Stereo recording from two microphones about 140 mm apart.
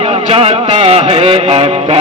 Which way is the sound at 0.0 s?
45° right (ahead or behind).